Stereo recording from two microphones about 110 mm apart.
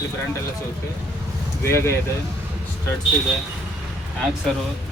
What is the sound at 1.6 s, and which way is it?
Speech, 25° left (ahead or behind).